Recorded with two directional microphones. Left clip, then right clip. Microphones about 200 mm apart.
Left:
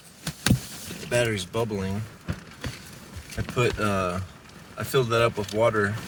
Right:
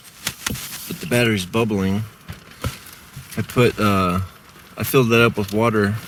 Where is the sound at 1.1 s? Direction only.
25° right (ahead or behind).